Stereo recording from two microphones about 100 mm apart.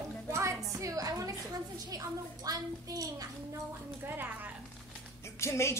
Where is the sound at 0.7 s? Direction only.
35° right (ahead or behind).